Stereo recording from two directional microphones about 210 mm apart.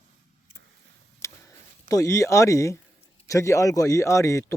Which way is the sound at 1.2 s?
15° left (ahead or behind).